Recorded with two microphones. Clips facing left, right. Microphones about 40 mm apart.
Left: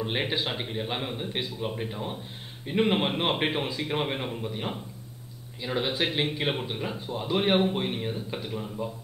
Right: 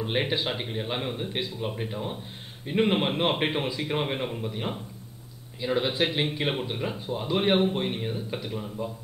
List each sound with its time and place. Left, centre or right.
0.0 s speech: centre